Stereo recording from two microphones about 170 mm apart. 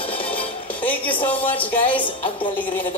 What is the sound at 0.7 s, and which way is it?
Music, 10° left (ahead or behind).